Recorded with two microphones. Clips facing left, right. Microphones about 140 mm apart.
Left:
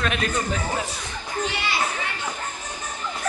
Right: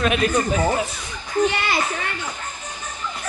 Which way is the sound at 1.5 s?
55° right (ahead or behind).